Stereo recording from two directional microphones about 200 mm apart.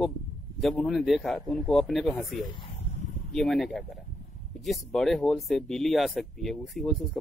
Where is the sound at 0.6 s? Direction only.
Centre (ahead or behind).